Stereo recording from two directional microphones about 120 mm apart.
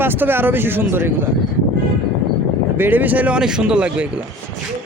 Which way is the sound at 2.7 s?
15° right (ahead or behind).